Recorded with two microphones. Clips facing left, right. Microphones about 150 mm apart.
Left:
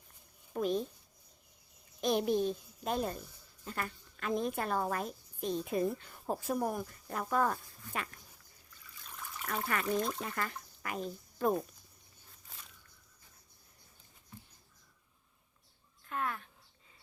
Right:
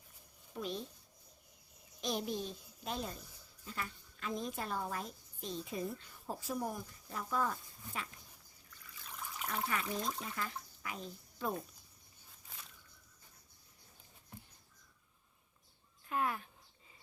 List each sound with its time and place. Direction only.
0.5 s speech: 50° left (ahead or behind)
2.0 s a child's voice: 60° left (ahead or behind)
9.5 s speech: 60° left (ahead or behind)
16.0 s speech: 5° right (ahead or behind)